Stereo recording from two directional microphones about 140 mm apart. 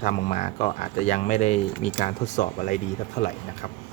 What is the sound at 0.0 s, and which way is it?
Speech, 50° left (ahead or behind).